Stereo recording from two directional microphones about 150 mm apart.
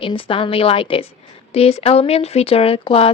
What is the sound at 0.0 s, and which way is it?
Speech, 35° left (ahead or behind).